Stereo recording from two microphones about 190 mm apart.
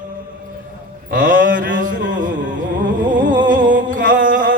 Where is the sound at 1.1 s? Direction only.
45° right (ahead or behind).